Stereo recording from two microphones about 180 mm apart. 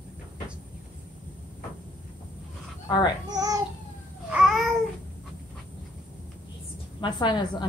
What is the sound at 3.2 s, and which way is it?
Speech, 20° right (ahead or behind).